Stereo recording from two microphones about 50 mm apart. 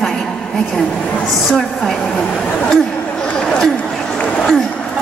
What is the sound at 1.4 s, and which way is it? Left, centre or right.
A woman's voice, centre.